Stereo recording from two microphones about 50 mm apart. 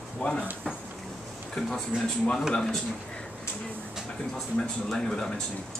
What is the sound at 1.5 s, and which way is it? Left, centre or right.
Speech, centre.